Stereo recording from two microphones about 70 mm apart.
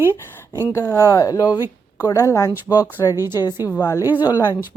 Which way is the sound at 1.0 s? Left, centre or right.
Left.